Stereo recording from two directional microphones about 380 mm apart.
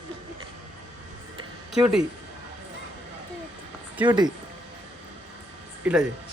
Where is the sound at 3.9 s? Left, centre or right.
Centre.